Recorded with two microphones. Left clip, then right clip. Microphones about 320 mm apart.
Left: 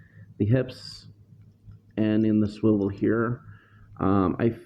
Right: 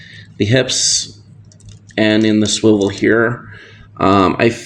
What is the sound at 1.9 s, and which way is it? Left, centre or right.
Speech, left.